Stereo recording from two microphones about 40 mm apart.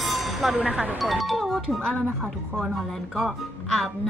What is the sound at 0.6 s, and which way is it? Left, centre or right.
Speech, right.